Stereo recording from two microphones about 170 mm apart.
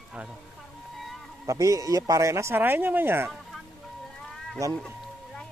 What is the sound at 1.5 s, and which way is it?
Speech, 20° right (ahead or behind).